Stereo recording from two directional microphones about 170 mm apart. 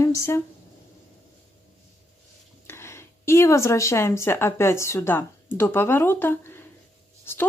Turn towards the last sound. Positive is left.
turn(degrees=15)  # may be behind; listen again after turning